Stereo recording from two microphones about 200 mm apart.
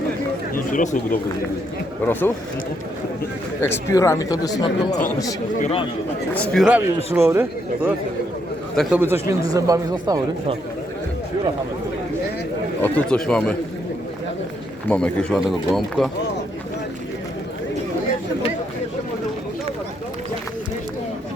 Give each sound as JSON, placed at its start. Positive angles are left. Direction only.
{"t": 0.5, "sound": "speech", "side_deg": 40}
{"t": 3.6, "sound": "speech", "side_deg": 15}
{"t": 5.5, "sound": "speech", "side_deg": 30}
{"t": 6.3, "sound": "speech", "side_deg": 5}
{"t": 9.0, "sound": "speech", "side_deg": -10}
{"t": 12.8, "sound": "speech", "side_deg": 5}
{"t": 14.8, "sound": "speech", "side_deg": 5}